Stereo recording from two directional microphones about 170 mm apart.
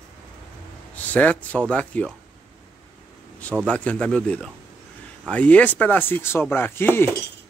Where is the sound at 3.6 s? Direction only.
5° left (ahead or behind).